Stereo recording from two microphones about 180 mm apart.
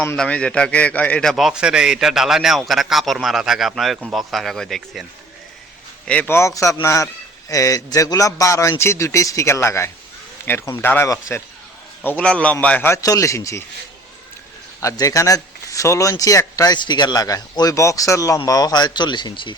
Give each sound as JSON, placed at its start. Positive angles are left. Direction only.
{"t": 0.0, "sound": "a man's voice", "side_deg": 10}
{"t": 6.1, "sound": "a man's voice", "side_deg": 10}
{"t": 14.8, "sound": "a man's voice", "side_deg": 20}